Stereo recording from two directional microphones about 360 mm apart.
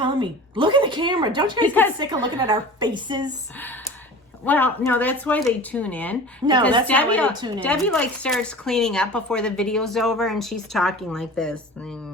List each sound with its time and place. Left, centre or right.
0.0 s a woman's voice: centre
4.4 s speech: centre
6.4 s a woman's voice: centre
6.8 s speech: centre
7.3 s a woman's voice: centre
7.6 s speech: centre